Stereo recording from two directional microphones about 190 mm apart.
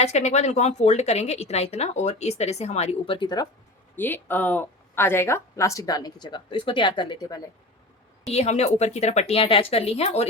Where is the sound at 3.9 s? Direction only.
10° left (ahead or behind).